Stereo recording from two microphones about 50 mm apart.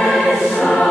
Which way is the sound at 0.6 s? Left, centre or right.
Centre.